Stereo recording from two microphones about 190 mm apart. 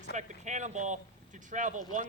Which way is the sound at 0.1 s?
40° right (ahead or behind).